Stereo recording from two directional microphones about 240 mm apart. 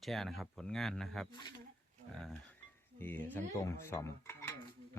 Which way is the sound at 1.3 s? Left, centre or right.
Centre.